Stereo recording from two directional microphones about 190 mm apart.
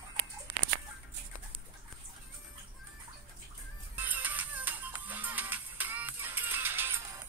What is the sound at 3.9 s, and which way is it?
Music, 10° right (ahead or behind).